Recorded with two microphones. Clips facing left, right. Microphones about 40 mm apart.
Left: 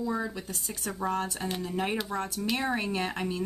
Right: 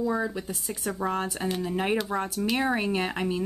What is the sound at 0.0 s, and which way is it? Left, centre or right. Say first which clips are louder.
Speech: right 4 dB; centre.